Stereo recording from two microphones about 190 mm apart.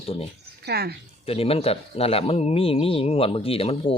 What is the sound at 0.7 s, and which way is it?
Speech, 55° right (ahead or behind).